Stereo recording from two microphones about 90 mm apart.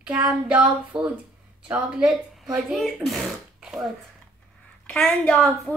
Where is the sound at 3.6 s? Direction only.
5° right (ahead or behind).